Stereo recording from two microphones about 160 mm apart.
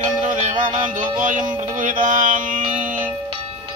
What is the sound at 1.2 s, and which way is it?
Music, 50° right (ahead or behind).